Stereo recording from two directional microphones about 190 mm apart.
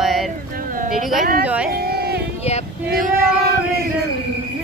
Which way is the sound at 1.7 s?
55° right (ahead or behind).